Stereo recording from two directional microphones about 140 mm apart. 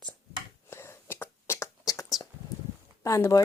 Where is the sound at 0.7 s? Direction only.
20° left (ahead or behind).